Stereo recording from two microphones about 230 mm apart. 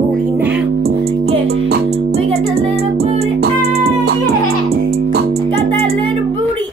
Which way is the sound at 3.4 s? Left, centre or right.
Right.